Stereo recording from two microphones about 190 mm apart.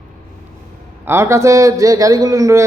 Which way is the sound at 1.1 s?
15° right (ahead or behind).